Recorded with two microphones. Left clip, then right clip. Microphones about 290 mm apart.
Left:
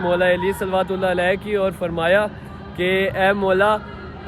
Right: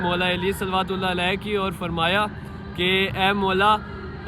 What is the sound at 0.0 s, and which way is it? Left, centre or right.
Music, centre.